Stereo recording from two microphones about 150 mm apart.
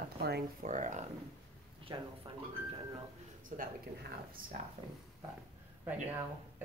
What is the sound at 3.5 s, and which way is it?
Speech, 55° right (ahead or behind).